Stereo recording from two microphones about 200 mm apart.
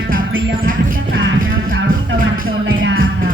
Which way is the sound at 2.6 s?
80° right.